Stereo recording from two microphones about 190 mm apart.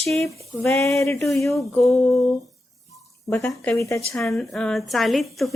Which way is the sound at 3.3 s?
10° left (ahead or behind).